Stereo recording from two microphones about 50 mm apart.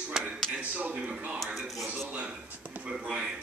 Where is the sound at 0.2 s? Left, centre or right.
Centre.